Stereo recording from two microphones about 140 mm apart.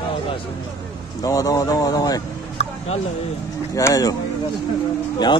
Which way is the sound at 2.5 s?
50° left (ahead or behind).